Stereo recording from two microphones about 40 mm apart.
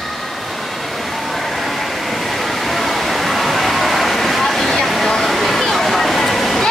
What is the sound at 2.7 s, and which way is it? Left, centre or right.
Waterfall, centre.